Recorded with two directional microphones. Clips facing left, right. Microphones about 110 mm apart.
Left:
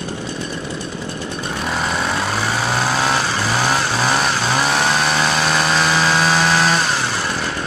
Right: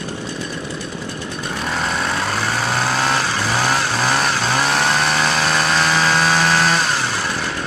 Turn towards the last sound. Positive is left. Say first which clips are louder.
# left 1 dB
turn(degrees=0)  # may be behind; listen again after turning